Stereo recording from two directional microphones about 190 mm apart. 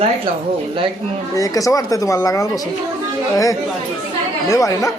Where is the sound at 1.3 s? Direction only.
15° left (ahead or behind).